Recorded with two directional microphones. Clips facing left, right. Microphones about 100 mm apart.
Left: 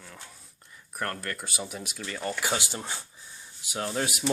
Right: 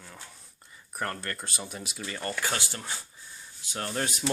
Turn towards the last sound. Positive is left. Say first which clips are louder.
# left 2 dB
turn(degrees=5)  # may be behind; listen again after turning